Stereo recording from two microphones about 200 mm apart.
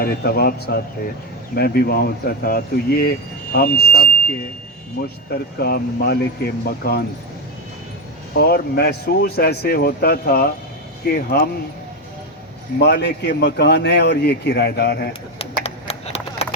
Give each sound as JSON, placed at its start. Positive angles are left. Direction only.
{"t": 0.0, "sound": "speech", "side_deg": 55}
{"t": 5.3, "sound": "speech", "side_deg": 50}
{"t": 8.4, "sound": "speech", "side_deg": 50}
{"t": 12.8, "sound": "a man's voice", "side_deg": 60}
{"t": 15.4, "sound": "a sound", "side_deg": 30}